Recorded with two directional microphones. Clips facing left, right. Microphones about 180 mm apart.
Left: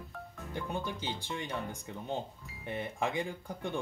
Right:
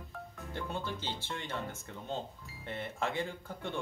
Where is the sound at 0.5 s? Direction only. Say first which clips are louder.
Left 2 dB; 15° left (ahead or behind).